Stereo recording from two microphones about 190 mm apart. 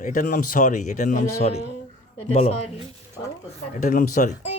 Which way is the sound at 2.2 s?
35° left (ahead or behind).